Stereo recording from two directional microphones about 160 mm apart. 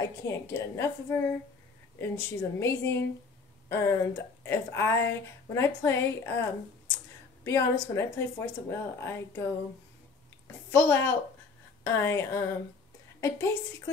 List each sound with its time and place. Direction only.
0.2 s speech: 15° left (ahead or behind)
7.4 s speech: 15° left (ahead or behind)
10.7 s speech: 15° left (ahead or behind)